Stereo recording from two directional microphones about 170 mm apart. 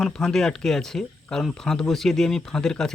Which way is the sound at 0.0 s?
5° left (ahead or behind).